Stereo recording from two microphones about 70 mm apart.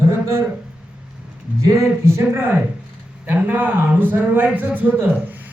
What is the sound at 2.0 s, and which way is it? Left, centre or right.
Speech, right.